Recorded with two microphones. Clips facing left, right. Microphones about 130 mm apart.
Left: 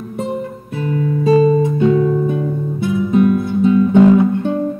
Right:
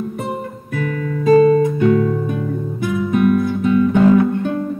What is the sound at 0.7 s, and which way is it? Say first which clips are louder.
Guitar: left 3 dB; 25° left (ahead or behind).